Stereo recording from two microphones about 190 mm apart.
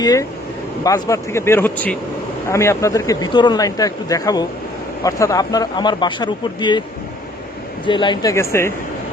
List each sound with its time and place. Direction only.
0.0 s speech: 20° left (ahead or behind)
7.9 s speech: 25° left (ahead or behind)